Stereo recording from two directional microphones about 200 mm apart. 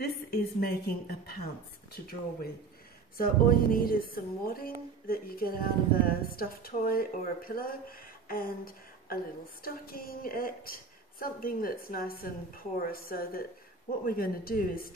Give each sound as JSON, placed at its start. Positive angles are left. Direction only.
{"t": 0.0, "sound": "a woman's voice", "side_deg": 50}